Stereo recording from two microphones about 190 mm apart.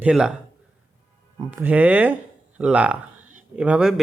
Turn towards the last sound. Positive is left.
turn(degrees=-5)  # may be behind; listen again after turning